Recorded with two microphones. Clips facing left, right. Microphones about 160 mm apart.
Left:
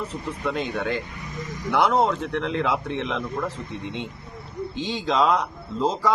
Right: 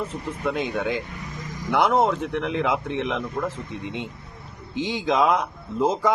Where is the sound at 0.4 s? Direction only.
10° right (ahead or behind).